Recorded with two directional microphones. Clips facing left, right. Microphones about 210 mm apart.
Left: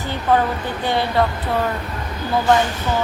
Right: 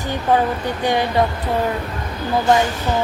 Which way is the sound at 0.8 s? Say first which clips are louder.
Right 1 dB; 15° right (ahead or behind).